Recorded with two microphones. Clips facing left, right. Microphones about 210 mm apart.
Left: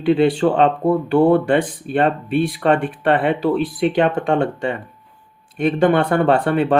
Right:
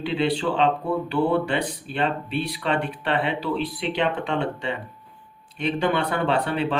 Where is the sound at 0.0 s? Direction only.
50° left (ahead or behind).